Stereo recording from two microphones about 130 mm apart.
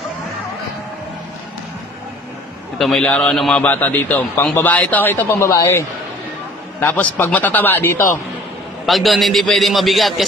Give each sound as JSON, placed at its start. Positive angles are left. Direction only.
{"t": 2.8, "sound": "a man's voice", "side_deg": 5}
{"t": 8.8, "sound": "a man's voice", "side_deg": 0}